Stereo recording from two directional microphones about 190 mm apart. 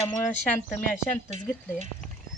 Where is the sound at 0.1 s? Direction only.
15° left (ahead or behind).